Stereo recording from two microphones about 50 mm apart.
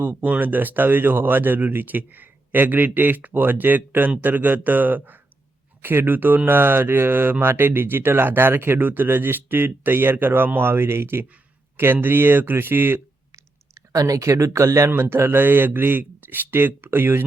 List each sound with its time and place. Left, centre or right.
0.2 s speech: right
13.3 s clicking: right
14.8 s speech: right